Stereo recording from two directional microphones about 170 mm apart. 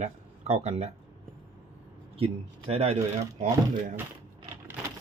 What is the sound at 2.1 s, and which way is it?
Speech, 35° right (ahead or behind).